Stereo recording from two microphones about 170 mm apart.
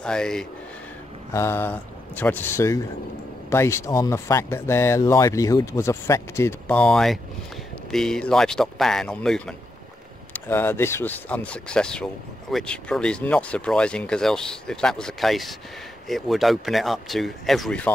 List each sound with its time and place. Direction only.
0.0 s speech: 5° left (ahead or behind)
1.3 s speech: 15° left (ahead or behind)